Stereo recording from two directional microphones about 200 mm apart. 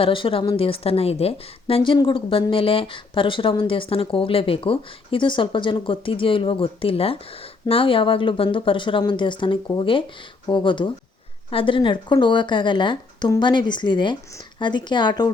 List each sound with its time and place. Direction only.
0.0 s a woman's voice: 25° left (ahead or behind)